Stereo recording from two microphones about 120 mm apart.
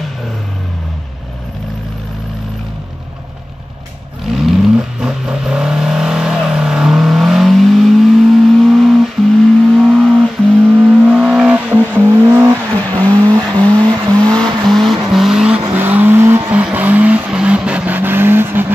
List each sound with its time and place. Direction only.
4.3 s vehicle: centre (ahead or behind)
10.6 s vehicle: 15° right (ahead or behind)
13.2 s vehicle: 35° right (ahead or behind)
14.3 s vehicle: 5° left (ahead or behind); by 18.7 s 15° right (ahead or behind)